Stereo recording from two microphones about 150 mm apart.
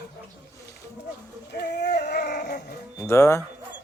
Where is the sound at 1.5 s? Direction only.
90° left; by 2.6 s 55° left (ahead or behind).